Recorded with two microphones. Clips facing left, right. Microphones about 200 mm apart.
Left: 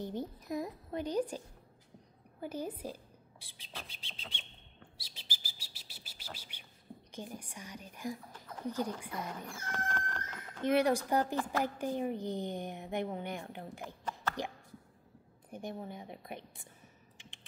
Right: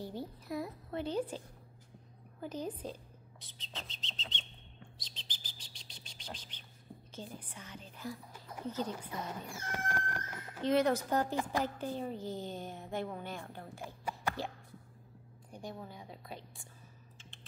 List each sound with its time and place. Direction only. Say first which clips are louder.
0.0 s speech: left 3 dB; 20° left (ahead or behind)
2.4 s speech: left 1 dB; 10° left (ahead or behind)
4.9 s bird: left 1 dB; 10° left (ahead or behind)
7.1 s a woman's voice: left 2 dB; 15° left (ahead or behind)
9.5 s speech: even; 10° right (ahead or behind)
10.6 s a woman's voice: left 1 dB; 10° left (ahead or behind)
17.2 s typing: left 1 dB; 15° left (ahead or behind)